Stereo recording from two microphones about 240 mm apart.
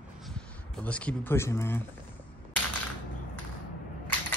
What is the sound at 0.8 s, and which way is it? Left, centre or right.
Speech, centre.